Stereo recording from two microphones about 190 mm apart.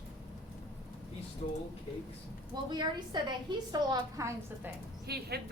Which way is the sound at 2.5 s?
25° right (ahead or behind).